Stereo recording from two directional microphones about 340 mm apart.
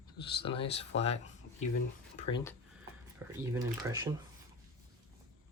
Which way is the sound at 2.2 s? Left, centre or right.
Centre.